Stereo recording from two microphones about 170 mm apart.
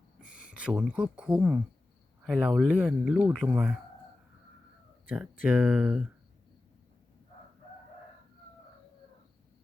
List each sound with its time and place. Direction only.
0.2 s a sound: 5° right (ahead or behind)
1.1 s speech: 5° right (ahead or behind)
5.0 s speech: 10° right (ahead or behind)